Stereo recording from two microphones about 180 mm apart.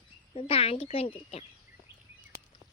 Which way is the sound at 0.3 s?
30° left (ahead or behind).